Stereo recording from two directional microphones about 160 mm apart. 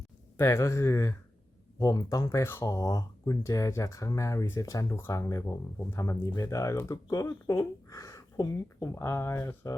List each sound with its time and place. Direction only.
0.3 s speech: 15° left (ahead or behind)